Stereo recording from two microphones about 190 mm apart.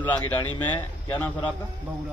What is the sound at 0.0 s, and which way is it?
A man's voice, 10° left (ahead or behind).